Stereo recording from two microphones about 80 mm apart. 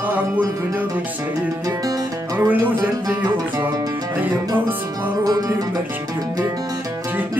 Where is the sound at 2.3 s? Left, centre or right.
Right.